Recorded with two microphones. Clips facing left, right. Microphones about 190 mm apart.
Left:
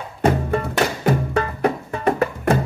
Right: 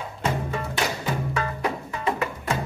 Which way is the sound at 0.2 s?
60° left (ahead or behind).